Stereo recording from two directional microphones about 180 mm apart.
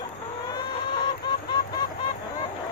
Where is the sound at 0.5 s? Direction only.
25° left (ahead or behind).